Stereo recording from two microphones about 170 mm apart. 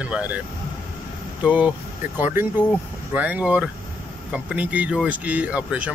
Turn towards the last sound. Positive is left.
turn(degrees=-10)  # may be behind; listen again after turning